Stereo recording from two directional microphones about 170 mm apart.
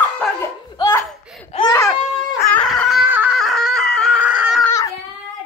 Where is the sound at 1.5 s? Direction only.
35° left (ahead or behind).